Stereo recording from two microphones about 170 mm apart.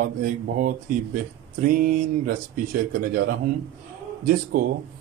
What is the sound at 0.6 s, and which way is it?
Speech, 55° right (ahead or behind).